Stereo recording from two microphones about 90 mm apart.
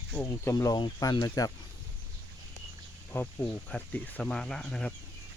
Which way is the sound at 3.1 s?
25° left (ahead or behind).